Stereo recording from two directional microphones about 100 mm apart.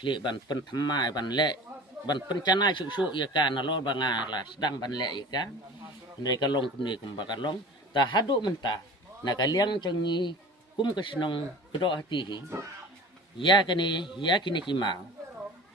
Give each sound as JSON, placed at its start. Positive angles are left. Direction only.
{"t": 0.0, "sound": "a man's voice", "side_deg": 55}
{"t": 13.4, "sound": "a man's voice", "side_deg": 50}